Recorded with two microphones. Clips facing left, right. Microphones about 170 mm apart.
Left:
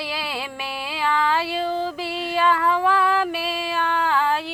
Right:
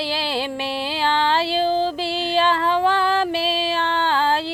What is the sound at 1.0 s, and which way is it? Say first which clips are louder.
Female singing: right 1 dB; 30° right (ahead or behind).